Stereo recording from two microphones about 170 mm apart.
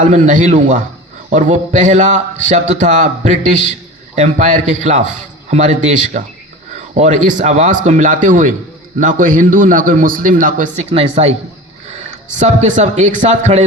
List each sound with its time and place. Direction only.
0.0 s a man's voice: 45° right (ahead or behind)